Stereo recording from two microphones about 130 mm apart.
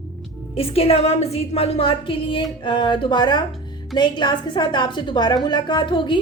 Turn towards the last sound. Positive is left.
turn(degrees=40)  # may be behind; listen again after turning